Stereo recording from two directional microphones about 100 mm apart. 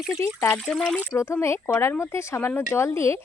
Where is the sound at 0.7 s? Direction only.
10° left (ahead or behind).